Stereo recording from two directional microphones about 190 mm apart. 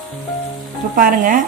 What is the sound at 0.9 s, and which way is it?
Speech, 45° right (ahead or behind).